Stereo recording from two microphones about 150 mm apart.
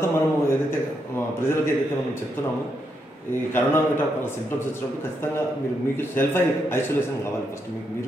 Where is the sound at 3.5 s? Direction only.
15° left (ahead or behind).